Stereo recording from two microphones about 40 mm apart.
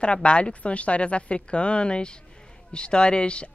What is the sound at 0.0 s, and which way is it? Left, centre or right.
Speech, left.